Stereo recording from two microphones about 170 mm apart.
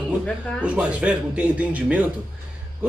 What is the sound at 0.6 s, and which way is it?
Speech, 5° right (ahead or behind).